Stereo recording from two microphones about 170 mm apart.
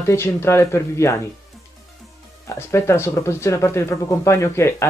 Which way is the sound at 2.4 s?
15° left (ahead or behind).